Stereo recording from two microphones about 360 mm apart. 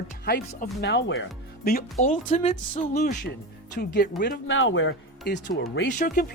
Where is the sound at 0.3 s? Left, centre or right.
Left.